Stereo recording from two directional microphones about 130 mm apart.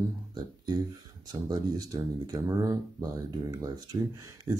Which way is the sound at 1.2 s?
30° right (ahead or behind).